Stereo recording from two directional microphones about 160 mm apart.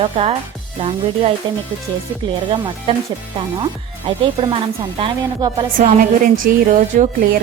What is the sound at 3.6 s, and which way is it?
Speech, 35° right (ahead or behind).